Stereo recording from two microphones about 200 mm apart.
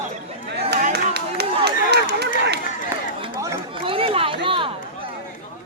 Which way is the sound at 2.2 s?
55° right (ahead or behind).